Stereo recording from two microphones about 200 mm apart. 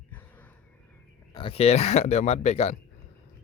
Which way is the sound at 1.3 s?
30° left (ahead or behind).